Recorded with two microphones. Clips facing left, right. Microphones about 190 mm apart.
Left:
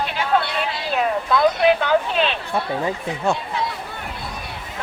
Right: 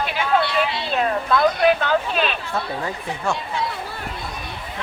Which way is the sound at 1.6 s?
20° left (ahead or behind).